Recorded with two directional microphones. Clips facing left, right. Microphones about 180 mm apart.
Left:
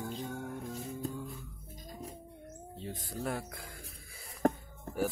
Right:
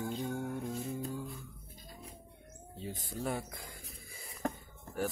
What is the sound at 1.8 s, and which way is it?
Music, 40° left (ahead or behind).